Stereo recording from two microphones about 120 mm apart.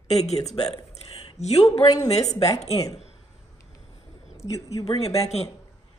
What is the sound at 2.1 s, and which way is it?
Speech, 65° left (ahead or behind).